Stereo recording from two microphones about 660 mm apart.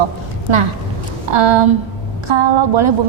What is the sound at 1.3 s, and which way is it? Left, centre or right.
A woman's voice, right.